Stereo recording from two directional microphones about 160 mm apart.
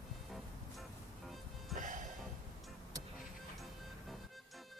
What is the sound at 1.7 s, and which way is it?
Music, 50° right (ahead or behind).